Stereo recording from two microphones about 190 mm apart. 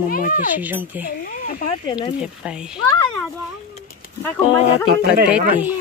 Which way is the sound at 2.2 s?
5° right (ahead or behind).